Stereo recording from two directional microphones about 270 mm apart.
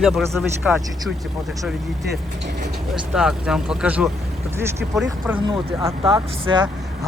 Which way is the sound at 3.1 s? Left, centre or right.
Centre.